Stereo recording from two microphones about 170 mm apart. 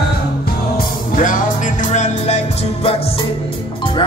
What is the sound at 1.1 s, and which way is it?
Music, 50° left (ahead or behind).